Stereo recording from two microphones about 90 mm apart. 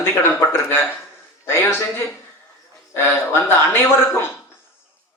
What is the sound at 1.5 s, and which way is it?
Speech, 25° left (ahead or behind).